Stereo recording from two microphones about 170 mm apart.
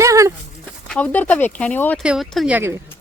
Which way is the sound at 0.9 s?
10° left (ahead or behind).